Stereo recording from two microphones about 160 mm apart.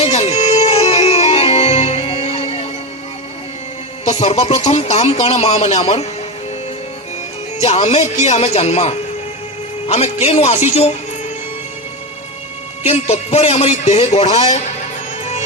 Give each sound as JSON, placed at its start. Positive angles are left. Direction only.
{"t": 0.0, "sound": "music", "side_deg": 40}
{"t": 4.0, "sound": "speech", "side_deg": 45}
{"t": 7.6, "sound": "speech", "side_deg": 40}
{"t": 12.8, "sound": "a man's voice", "side_deg": 40}